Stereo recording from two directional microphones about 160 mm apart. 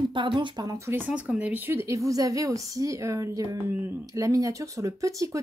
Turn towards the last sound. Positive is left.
turn(degrees=-20)  # may be behind; listen again after turning